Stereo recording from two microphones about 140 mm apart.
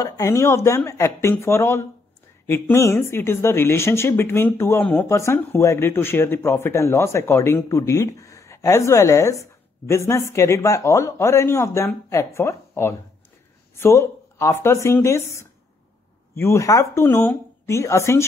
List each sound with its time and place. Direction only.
0.0 s speech: 20° left (ahead or behind)